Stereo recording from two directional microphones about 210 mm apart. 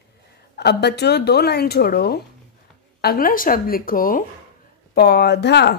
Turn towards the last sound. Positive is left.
turn(degrees=50)  # may be behind; listen again after turning